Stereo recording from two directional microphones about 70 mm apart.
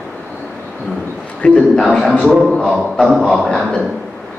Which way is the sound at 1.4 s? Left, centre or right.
Centre.